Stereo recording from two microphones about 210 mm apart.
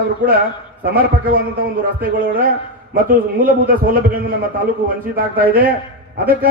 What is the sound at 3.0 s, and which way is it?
Speech, 40° right (ahead or behind).